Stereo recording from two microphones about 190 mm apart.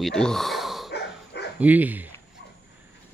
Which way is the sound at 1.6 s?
10° right (ahead or behind).